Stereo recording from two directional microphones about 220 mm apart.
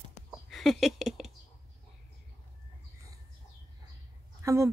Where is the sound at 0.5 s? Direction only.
Centre (ahead or behind).